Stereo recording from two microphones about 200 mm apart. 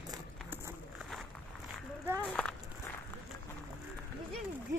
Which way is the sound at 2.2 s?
5° left (ahead or behind).